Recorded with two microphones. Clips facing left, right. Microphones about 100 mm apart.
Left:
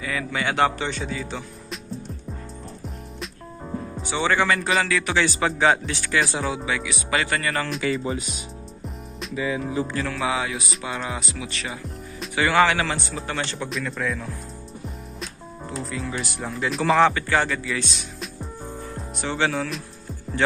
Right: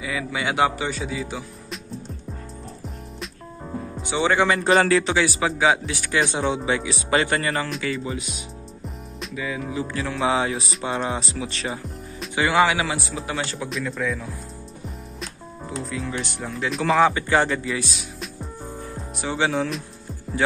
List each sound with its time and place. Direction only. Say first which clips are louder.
0.0 s speech: even; 10° right (ahead or behind)
3.2 s music: left 1 dB; centre (ahead or behind)
4.0 s speech: right 2 dB; 15° right (ahead or behind)
4.6 s music: right 5 dB; 35° right (ahead or behind)
5.1 s speech: even; 10° right (ahead or behind)
6.3 s speech: right 3 dB; 25° right (ahead or behind)
7.9 s speech: left 2 dB; 35° left (ahead or behind)
9.3 s music: left 3 dB; 30° left (ahead or behind)
10.1 s music: right 6 dB; 30° right (ahead or behind)
12.4 s speech: even; 15° right (ahead or behind); by 14.2 s centre (ahead or behind)
15.1 s music: even; centre (ahead or behind)
17.1 s speech: right 2 dB; 20° right (ahead or behind)
17.7 s music: even; 5° right (ahead or behind)
19.2 s speech: right 1 dB; 15° right (ahead or behind)